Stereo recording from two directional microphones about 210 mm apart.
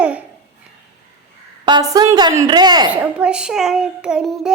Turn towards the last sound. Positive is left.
turn(degrees=0)  # may be behind; listen again after turning